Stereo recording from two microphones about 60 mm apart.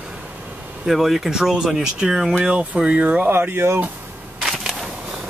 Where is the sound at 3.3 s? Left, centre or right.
Right.